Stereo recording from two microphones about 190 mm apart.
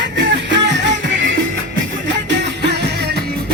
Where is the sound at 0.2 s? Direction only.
70° right (ahead or behind).